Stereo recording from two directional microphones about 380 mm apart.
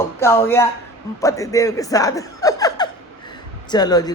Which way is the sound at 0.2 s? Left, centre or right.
Centre.